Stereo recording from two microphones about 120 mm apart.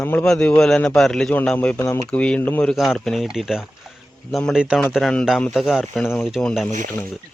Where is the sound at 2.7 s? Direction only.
Centre (ahead or behind).